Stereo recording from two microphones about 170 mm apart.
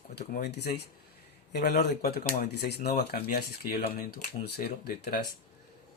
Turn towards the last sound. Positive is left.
turn(degrees=70)  # may be behind; listen again after turning